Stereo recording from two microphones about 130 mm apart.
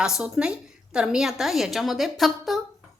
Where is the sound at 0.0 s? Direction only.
5° right (ahead or behind).